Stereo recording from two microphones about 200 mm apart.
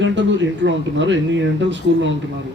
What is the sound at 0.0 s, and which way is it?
Speech, 65° right (ahead or behind).